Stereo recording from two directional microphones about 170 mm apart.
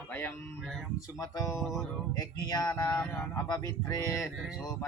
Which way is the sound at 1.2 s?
20° left (ahead or behind).